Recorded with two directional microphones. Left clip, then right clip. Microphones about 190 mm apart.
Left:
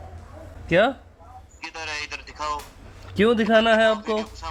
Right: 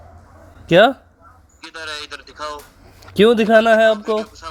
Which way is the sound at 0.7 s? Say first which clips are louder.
Right 8 dB; 40° right (ahead or behind).